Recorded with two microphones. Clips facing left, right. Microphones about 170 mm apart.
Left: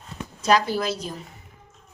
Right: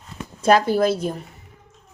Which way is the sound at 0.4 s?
50° right (ahead or behind).